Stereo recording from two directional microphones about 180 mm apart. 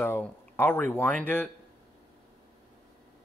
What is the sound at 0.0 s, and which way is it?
Speech, 10° left (ahead or behind).